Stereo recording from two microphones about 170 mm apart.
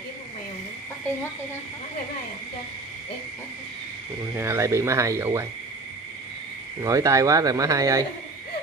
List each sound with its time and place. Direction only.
4.4 s speech: 15° right (ahead or behind)
6.8 s speech: 20° right (ahead or behind)